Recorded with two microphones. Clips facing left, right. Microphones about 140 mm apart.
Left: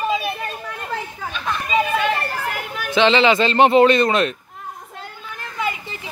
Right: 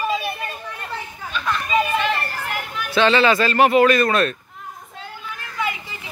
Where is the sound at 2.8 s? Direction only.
20° left (ahead or behind).